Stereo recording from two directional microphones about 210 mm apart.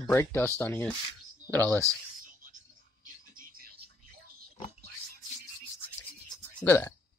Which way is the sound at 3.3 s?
45° right (ahead or behind).